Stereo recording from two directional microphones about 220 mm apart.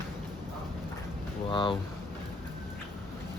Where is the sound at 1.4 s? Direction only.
20° left (ahead or behind).